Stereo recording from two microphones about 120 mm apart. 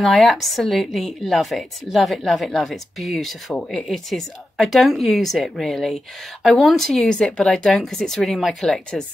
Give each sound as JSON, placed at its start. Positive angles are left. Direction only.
{"t": 0.0, "sound": "speech", "side_deg": 0}